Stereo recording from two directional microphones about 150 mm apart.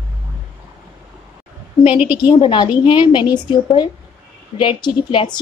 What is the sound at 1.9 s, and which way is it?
Speech, 10° right (ahead or behind).